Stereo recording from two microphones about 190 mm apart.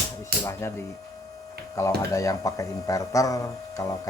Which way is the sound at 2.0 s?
15° left (ahead or behind).